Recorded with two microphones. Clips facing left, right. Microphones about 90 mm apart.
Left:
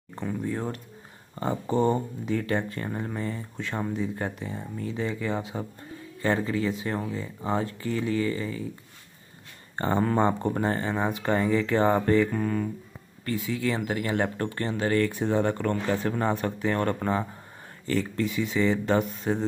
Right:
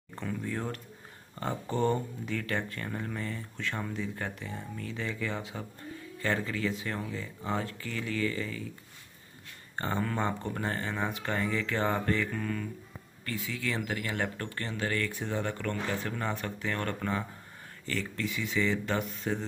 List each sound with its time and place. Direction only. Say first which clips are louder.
0.2 s speech: left 5 dB; 15° left (ahead or behind)
9.8 s speech: left 8 dB; 30° left (ahead or behind)